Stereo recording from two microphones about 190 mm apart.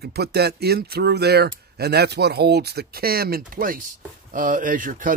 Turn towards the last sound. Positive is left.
turn(degrees=-45)  # may be behind; listen again after turning